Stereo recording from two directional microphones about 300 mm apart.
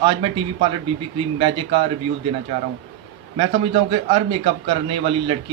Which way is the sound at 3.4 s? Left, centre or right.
Centre.